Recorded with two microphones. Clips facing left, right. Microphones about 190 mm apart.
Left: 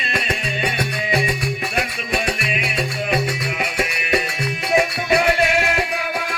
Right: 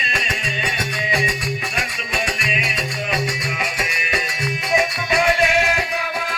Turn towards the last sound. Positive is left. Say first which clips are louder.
# left 1 dB
turn(degrees=60)  # may be behind; listen again after turning